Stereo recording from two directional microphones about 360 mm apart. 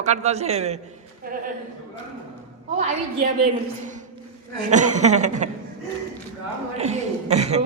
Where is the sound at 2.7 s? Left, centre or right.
Right.